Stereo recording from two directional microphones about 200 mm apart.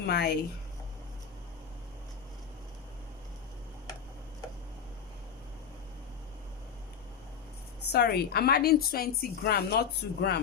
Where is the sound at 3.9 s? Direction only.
15° left (ahead or behind).